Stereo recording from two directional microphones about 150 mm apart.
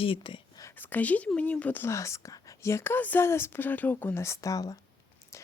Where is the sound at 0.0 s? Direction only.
35° left (ahead or behind).